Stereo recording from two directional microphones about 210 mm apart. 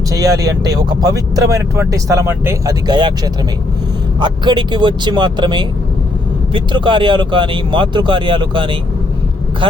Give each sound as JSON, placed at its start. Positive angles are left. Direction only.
{"t": 0.1, "sound": "speech", "side_deg": -15}
{"t": 4.2, "sound": "speech", "side_deg": -20}